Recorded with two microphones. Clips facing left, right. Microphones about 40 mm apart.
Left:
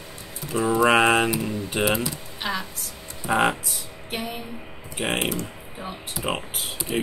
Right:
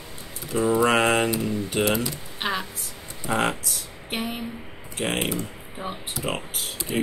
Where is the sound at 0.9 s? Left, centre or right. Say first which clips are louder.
Left 2 dB; centre.